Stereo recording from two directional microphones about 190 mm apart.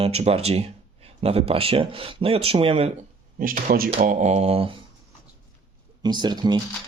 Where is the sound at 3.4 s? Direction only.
45° right (ahead or behind).